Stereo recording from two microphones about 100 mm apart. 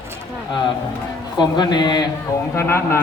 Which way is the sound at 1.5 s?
50° left (ahead or behind).